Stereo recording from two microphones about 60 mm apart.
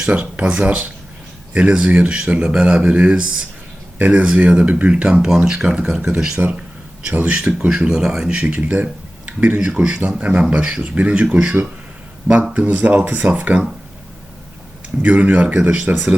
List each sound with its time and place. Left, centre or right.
0.0 s speech: centre
3.9 s speech: right; by 6.4 s centre
7.0 s speech: right
12.5 s speech: right
15.0 s speech: right